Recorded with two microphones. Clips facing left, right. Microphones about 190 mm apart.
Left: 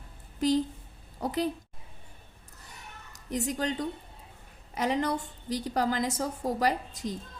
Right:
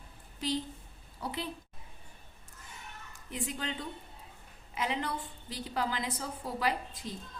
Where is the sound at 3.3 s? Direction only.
40° left (ahead or behind).